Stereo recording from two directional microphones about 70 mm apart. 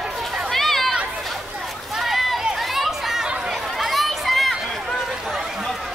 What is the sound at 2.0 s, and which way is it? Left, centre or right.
Chatter, centre.